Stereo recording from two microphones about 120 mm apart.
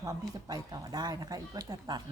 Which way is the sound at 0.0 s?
30° right (ahead or behind).